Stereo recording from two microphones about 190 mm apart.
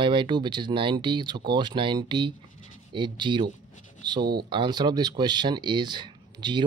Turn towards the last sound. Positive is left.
turn(degrees=-25)  # may be behind; listen again after turning